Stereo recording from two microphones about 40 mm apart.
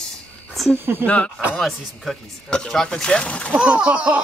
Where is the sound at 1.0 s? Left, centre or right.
Left.